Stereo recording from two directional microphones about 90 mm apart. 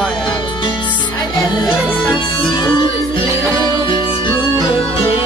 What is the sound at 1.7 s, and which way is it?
Speech, 15° right (ahead or behind).